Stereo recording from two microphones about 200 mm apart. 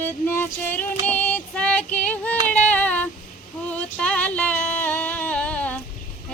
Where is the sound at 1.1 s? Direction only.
10° left (ahead or behind).